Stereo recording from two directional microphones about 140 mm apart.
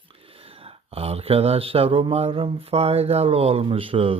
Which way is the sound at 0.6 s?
45° right (ahead or behind).